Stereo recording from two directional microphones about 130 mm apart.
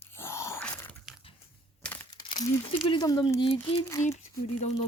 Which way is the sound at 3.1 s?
30° left (ahead or behind).